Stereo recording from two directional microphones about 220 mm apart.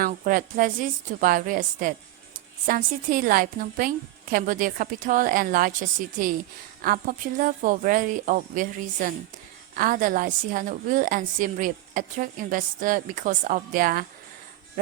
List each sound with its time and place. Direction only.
0.0 s a woman's voice: 40° right (ahead or behind)